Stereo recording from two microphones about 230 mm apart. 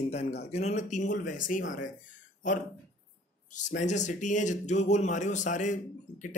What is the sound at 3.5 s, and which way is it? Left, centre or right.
Speech, left.